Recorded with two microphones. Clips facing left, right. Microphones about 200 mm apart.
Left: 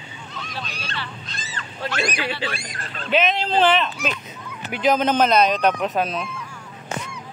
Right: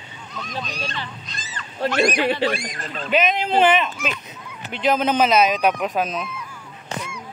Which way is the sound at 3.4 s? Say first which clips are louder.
Right 1 dB; 10° right (ahead or behind).